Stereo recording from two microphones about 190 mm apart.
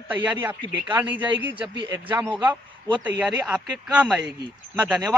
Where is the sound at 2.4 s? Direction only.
25° right (ahead or behind).